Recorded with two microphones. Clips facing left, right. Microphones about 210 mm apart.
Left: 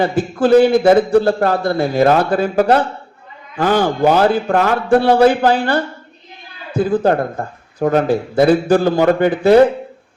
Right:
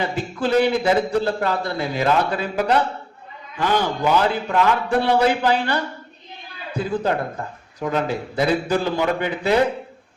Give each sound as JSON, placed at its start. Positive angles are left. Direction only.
{"t": 0.0, "sound": "a man's voice", "side_deg": 50}